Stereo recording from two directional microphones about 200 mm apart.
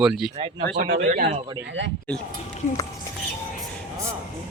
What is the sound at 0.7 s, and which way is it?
Speech, 55° right (ahead or behind).